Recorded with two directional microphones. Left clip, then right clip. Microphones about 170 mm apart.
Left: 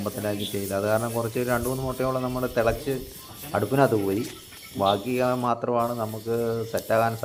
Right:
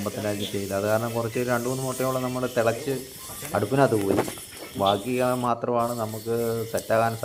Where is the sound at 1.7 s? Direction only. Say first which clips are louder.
Even; 5° right (ahead or behind).